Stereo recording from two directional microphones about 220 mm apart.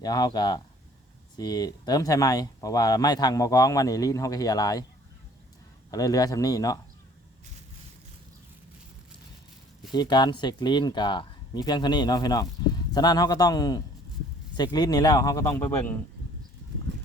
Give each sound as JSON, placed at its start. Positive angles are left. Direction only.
{"t": 0.0, "sound": "speech", "side_deg": 20}
{"t": 5.9, "sound": "speech", "side_deg": 15}
{"t": 9.9, "sound": "speech", "side_deg": 20}